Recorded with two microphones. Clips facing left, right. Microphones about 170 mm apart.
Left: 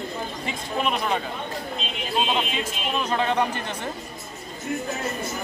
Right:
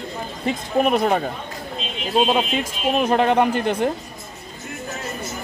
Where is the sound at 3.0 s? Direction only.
55° right (ahead or behind).